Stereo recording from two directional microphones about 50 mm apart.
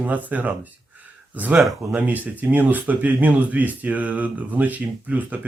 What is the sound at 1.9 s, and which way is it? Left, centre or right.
Speech, right.